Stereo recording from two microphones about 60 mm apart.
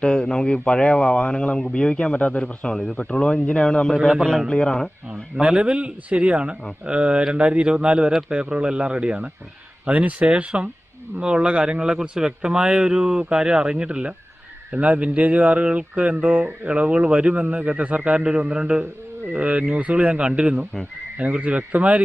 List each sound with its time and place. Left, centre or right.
0.0 s speech: centre
3.9 s a man's voice: centre
4.5 s speech: centre
5.4 s a man's voice: centre